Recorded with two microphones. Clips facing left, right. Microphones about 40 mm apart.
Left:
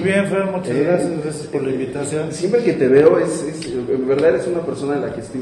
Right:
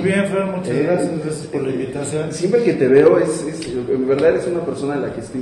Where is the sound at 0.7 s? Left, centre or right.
Centre.